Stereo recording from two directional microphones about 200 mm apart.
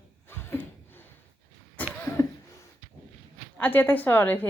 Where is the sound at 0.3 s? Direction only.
10° left (ahead or behind).